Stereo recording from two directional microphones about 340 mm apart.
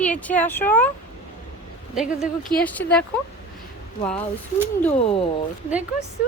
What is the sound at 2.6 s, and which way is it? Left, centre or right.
Speech, centre.